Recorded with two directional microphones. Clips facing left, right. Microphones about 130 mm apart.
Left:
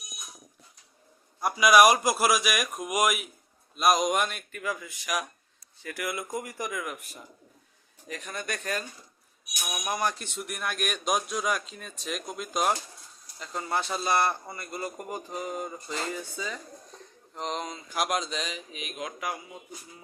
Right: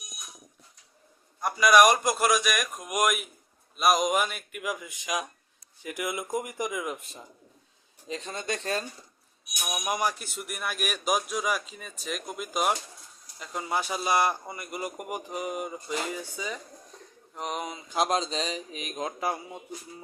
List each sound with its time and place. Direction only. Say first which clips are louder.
1.4 s speech: even; 5° left (ahead or behind)
4.6 s a man's voice: even; 15° right (ahead or behind)
9.6 s a man's voice: right 1 dB; 15° right (ahead or behind)
17.9 s speech: right 3 dB; 25° right (ahead or behind)